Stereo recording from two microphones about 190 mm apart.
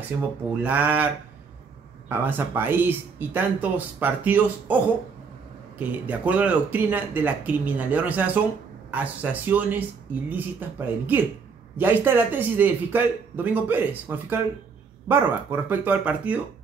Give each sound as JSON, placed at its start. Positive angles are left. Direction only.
{"t": 0.5, "sound": "speech", "side_deg": -10}
{"t": 2.0, "sound": "speech", "side_deg": -10}